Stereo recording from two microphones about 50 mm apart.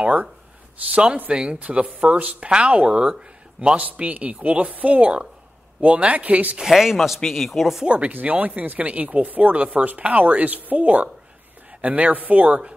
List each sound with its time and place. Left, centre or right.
0.0 s speech: right
6.6 s speech: centre
7.8 s speech: right